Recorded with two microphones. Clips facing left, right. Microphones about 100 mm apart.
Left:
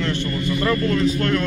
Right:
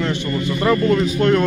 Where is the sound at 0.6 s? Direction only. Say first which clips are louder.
Right 4 dB; 20° right (ahead or behind).